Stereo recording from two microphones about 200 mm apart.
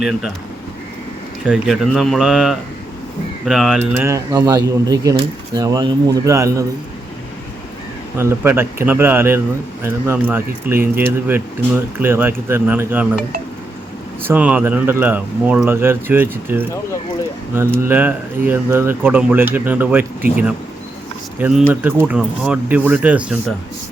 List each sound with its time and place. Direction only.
1.5 s speech: centre (ahead or behind)
3.9 s speech: 15° right (ahead or behind)
8.2 s speech: 10° right (ahead or behind)
14.3 s speech: 5° right (ahead or behind)